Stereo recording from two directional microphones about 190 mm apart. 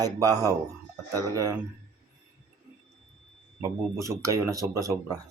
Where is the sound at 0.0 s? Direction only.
20° right (ahead or behind).